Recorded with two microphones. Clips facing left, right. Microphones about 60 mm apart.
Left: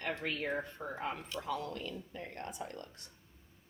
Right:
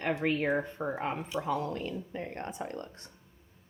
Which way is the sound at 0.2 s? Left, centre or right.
Right.